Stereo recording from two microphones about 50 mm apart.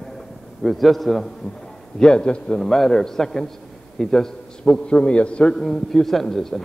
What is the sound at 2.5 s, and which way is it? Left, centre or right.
A man's voice, centre.